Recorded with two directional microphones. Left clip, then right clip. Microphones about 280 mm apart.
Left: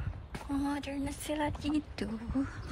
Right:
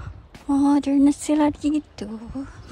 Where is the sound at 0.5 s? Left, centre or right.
Centre.